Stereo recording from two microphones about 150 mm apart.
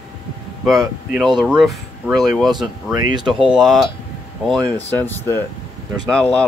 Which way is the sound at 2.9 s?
25° right (ahead or behind).